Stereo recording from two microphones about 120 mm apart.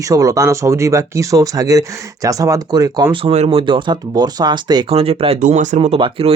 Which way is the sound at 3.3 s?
70° right (ahead or behind).